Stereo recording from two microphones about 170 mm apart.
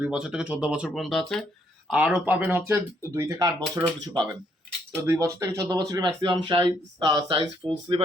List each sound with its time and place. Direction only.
0.0 s speech: 5° right (ahead or behind)
1.9 s speech: 10° right (ahead or behind); by 8.0 s 30° right (ahead or behind)